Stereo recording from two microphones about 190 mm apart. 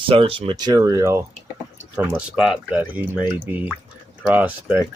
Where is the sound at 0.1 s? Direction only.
30° right (ahead or behind).